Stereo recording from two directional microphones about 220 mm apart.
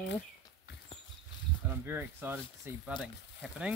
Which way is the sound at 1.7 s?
10° right (ahead or behind).